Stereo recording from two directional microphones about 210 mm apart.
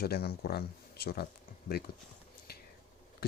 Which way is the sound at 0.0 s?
50° left (ahead or behind).